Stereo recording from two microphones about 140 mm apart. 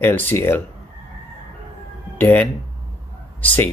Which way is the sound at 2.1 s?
10° left (ahead or behind).